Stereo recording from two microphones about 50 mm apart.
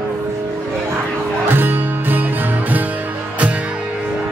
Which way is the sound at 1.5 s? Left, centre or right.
Right.